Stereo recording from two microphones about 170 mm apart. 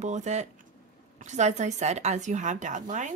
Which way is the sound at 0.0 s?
45° right (ahead or behind).